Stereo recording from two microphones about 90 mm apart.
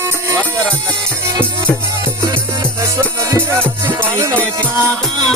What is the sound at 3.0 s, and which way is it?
Music, 30° right (ahead or behind).